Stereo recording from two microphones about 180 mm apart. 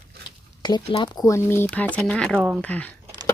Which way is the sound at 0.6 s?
25° left (ahead or behind).